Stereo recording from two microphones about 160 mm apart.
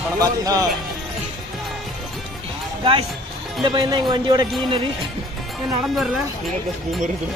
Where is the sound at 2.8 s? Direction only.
35° right (ahead or behind).